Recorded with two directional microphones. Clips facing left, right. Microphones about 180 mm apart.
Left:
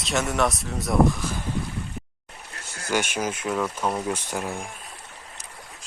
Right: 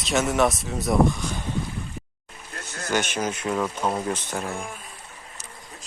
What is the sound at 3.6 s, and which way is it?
Speech, 10° right (ahead or behind).